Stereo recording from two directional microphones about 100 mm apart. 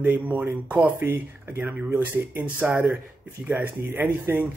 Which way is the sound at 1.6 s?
5° right (ahead or behind).